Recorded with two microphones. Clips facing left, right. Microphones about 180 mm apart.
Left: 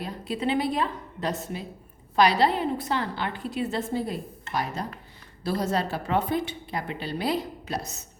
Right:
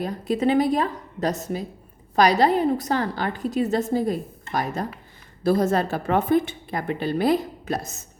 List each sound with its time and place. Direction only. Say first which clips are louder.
0.0 s a woman's voice: right 7 dB; 45° right (ahead or behind)